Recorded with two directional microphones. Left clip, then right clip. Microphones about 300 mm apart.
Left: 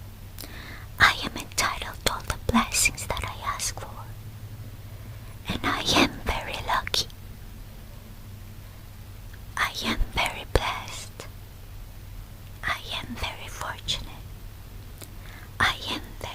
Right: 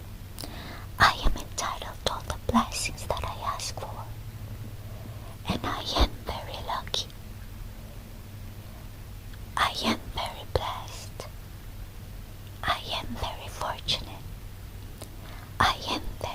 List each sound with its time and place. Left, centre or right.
0.3 s whispering: centre
5.6 s whispering: centre
9.6 s whispering: centre
10.2 s whispering: centre
12.6 s whispering: centre
15.3 s whispering: centre